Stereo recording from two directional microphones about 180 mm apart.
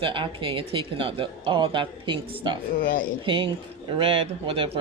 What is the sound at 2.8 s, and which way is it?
Speech, 50° left (ahead or behind).